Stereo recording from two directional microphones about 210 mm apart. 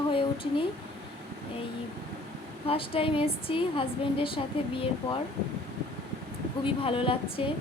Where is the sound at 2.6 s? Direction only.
25° left (ahead or behind).